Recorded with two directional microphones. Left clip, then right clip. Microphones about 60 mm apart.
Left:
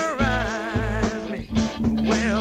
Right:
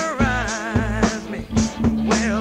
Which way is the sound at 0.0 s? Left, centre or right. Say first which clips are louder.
Right 1 dB; left.